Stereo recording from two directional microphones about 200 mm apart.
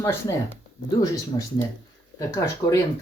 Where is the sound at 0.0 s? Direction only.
15° left (ahead or behind).